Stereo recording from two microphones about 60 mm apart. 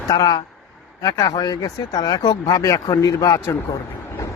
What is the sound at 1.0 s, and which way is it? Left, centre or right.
Speech, left.